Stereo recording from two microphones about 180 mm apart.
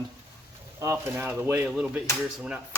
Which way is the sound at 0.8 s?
15° right (ahead or behind).